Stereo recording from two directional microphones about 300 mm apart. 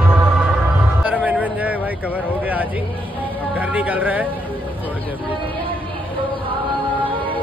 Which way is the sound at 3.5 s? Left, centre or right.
Centre.